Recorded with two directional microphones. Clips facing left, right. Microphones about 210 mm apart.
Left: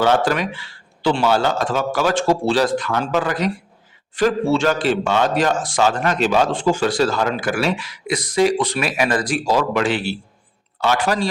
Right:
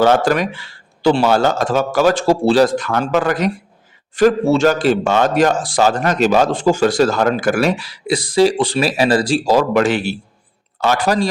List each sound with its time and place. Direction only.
0.0 s a man's voice: 45° right (ahead or behind)
9.6 s a man's voice: 45° right (ahead or behind)